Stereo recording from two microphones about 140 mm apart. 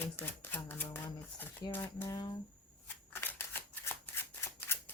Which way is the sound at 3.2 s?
15° left (ahead or behind).